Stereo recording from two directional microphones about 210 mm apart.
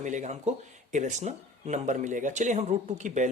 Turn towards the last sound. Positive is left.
turn(degrees=-35)  # may be behind; listen again after turning